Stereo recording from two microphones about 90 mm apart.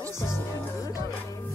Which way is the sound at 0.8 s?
35° left (ahead or behind).